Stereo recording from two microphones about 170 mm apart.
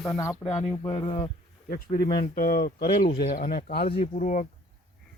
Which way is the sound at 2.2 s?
60° left (ahead or behind).